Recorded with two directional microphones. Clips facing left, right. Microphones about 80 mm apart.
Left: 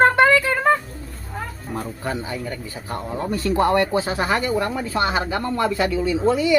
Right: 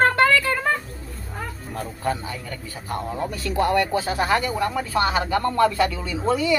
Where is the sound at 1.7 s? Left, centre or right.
Left.